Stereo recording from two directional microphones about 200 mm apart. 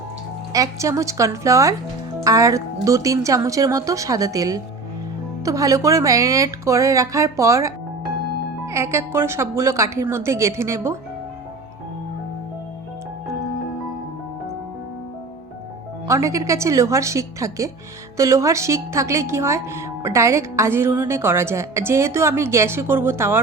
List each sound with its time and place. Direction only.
0.5 s speech: 15° right (ahead or behind)
16.0 s speech: 15° right (ahead or behind)